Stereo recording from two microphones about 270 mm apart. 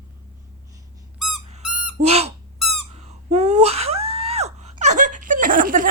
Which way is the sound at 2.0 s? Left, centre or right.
Right.